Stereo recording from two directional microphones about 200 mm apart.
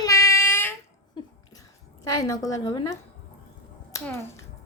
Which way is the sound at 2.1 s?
15° left (ahead or behind).